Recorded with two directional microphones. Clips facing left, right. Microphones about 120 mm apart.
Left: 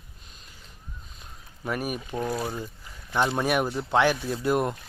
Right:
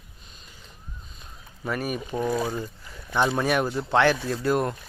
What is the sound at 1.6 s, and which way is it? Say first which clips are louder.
Speech: right 1 dB; 5° left (ahead or behind).